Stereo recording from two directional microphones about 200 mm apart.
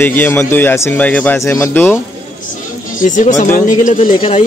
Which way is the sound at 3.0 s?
40° left (ahead or behind).